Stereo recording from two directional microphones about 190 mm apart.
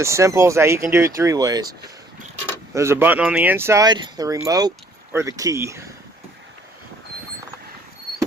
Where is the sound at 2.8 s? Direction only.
15° right (ahead or behind).